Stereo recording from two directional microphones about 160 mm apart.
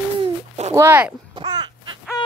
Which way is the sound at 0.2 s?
40° right (ahead or behind).